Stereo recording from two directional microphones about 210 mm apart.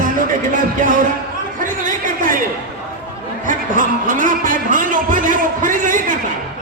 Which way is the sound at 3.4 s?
40° right (ahead or behind).